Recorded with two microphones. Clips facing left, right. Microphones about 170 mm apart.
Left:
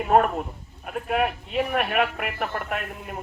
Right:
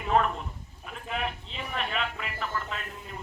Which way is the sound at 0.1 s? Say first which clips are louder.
Left 5 dB; 50° left (ahead or behind).